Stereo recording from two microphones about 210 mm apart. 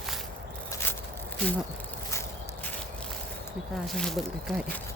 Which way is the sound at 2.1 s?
15° left (ahead or behind).